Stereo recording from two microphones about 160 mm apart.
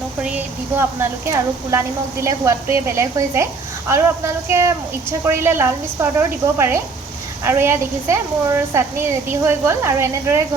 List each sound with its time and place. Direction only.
0.2 s a woman's voice: 10° right (ahead or behind)